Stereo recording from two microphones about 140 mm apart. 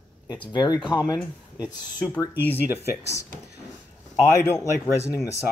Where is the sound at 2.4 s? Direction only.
15° left (ahead or behind).